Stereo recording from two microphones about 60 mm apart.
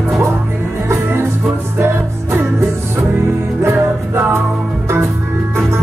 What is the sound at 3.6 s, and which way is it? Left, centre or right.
Music, right.